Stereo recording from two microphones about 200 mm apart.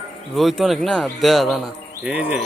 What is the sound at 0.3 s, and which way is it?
A man's voice, centre (ahead or behind).